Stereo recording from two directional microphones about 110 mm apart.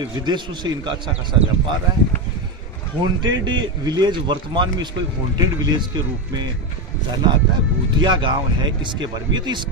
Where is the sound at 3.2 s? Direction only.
45° right (ahead or behind).